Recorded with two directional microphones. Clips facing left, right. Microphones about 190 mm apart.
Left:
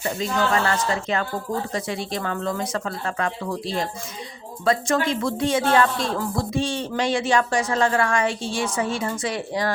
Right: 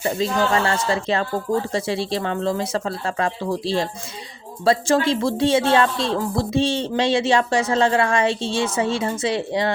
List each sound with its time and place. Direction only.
0.2 s speech: 30° right (ahead or behind)